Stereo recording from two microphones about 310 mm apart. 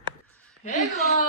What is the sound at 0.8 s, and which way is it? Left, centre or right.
Speech, centre.